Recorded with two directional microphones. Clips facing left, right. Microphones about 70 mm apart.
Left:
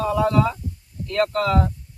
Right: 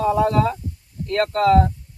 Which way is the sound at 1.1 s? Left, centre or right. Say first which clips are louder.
Even; right.